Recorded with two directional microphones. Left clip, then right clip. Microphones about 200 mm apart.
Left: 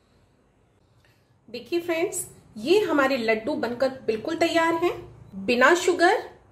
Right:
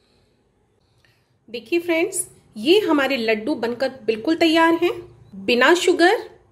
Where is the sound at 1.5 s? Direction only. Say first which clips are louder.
Right 6 dB; 35° right (ahead or behind).